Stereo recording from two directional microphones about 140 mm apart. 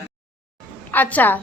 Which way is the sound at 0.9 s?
15° left (ahead or behind).